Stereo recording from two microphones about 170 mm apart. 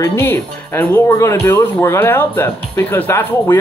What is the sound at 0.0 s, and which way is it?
Speech, 15° left (ahead or behind).